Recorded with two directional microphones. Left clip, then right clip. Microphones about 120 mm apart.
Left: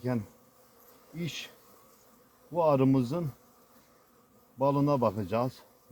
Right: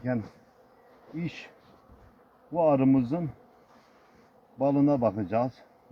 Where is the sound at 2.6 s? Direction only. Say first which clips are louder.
Right 2 dB; 90° left.